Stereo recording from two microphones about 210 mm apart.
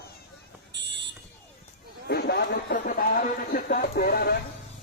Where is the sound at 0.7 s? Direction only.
55° right (ahead or behind).